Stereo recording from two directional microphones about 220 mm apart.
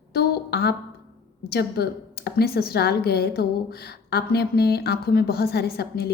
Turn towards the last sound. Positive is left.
turn(degrees=45)  # may be behind; listen again after turning